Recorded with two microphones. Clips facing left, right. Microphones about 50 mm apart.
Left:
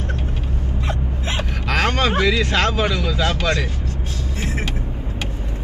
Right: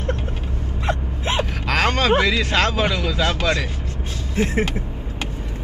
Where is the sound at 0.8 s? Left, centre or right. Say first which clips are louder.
Right 5 dB; right.